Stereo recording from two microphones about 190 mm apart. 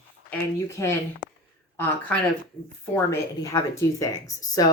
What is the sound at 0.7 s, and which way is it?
Speech, 15° left (ahead or behind).